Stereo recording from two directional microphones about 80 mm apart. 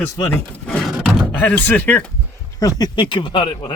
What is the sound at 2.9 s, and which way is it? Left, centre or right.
Speech, left.